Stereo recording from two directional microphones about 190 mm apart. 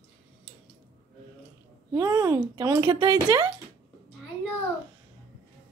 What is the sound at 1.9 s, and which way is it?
A woman's voice, 15° right (ahead or behind).